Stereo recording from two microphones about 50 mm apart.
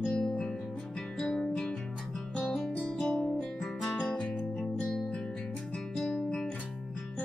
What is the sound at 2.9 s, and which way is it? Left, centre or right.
Guitar, centre.